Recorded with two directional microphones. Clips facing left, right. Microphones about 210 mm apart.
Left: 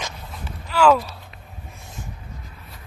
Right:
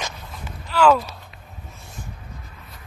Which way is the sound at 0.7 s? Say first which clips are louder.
Even; 5° left (ahead or behind).